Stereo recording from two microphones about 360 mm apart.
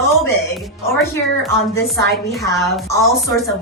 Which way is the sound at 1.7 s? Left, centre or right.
Centre.